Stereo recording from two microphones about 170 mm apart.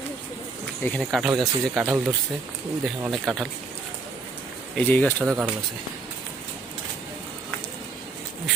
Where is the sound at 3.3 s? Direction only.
Centre (ahead or behind).